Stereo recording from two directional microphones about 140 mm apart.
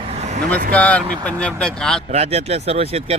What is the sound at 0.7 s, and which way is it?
Speech, 10° left (ahead or behind).